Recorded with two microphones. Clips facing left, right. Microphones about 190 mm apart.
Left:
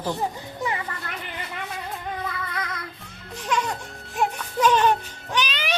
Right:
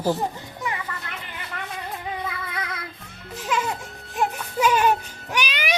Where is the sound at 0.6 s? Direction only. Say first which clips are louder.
Left 2 dB; centre (ahead or behind).